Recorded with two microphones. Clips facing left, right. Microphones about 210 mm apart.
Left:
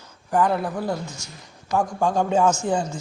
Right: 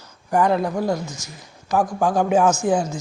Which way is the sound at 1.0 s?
10° left (ahead or behind).